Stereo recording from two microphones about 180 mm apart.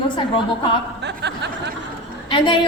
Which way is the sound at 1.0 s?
70° right (ahead or behind).